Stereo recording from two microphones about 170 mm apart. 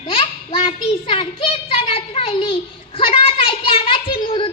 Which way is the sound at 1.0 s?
30° left (ahead or behind).